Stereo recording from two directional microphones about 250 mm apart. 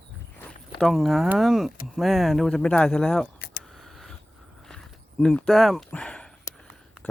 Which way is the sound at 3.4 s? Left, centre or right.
Left.